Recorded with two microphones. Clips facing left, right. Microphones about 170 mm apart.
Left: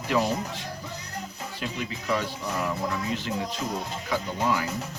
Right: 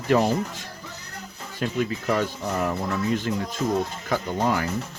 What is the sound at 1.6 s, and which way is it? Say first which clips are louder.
Speech: right 8 dB; 50° right (ahead or behind).